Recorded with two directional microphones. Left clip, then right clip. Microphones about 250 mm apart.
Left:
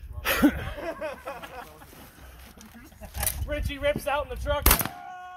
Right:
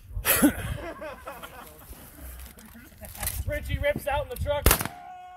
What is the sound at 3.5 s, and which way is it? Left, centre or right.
Speech, left.